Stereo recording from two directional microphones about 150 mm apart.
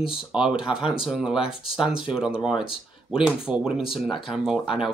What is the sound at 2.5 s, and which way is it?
Speech, 35° left (ahead or behind).